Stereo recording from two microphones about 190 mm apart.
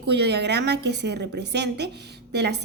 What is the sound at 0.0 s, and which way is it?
A woman's voice, 60° right (ahead or behind).